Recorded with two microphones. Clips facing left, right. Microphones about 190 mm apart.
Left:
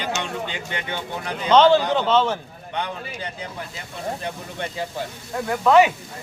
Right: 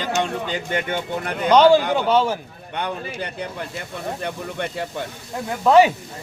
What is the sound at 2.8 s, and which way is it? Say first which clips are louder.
Speech: right 4 dB; 65° right (ahead or behind).